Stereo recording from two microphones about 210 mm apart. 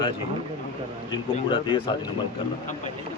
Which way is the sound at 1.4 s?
20° left (ahead or behind).